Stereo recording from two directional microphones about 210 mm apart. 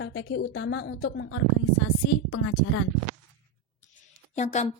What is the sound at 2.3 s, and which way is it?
Speech, 90° left.